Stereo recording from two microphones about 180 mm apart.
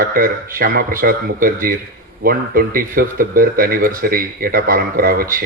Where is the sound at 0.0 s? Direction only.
50° right (ahead or behind).